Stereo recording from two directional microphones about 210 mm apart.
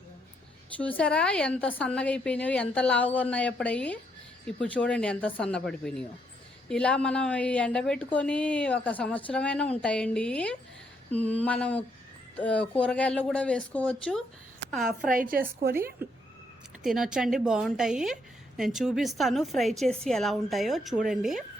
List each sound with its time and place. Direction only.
0.8 s a woman's voice: 5° left (ahead or behind)
11.1 s a sound: 5° left (ahead or behind)
12.4 s a woman's voice: 5° left (ahead or behind)
15.1 s a woman's voice: 40° right (ahead or behind)
16.8 s a woman's voice: 5° right (ahead or behind)